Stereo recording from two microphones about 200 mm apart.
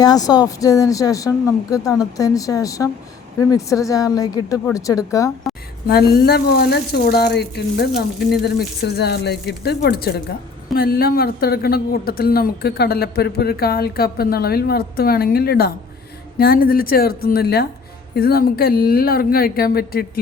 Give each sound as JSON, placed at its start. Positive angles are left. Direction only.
{"t": 0.0, "sound": "a woman's voice", "side_deg": 20}
{"t": 5.9, "sound": "a woman's voice", "side_deg": 50}